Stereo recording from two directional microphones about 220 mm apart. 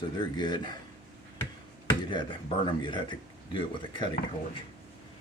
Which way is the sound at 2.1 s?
20° left (ahead or behind).